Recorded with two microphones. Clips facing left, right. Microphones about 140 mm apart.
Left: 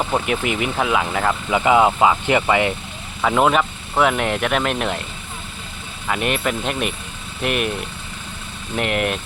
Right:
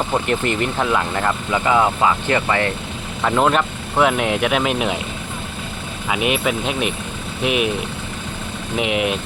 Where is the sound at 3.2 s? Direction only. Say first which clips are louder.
Even; 5° left (ahead or behind).